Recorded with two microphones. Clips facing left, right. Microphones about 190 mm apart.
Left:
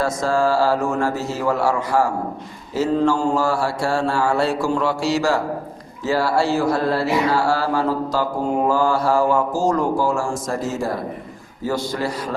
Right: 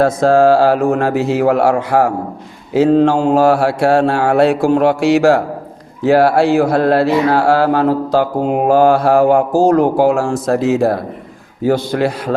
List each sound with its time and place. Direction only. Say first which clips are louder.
0.0 s mantra: right 9 dB; 60° right (ahead or behind)